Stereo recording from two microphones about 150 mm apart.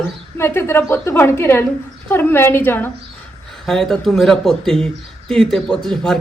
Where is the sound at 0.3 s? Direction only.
15° left (ahead or behind).